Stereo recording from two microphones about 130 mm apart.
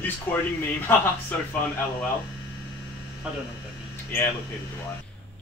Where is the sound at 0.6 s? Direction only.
15° left (ahead or behind).